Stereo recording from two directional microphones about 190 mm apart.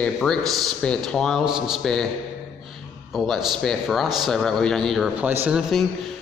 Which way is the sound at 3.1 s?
Centre (ahead or behind).